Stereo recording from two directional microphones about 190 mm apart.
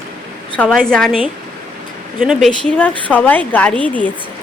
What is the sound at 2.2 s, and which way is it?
Speech, centre (ahead or behind).